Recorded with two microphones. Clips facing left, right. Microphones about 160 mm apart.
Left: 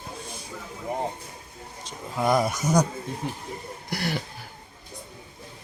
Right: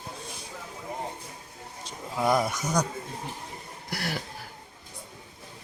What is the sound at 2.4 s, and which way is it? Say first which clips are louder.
Speech: left 5 dB; 20° left (ahead or behind).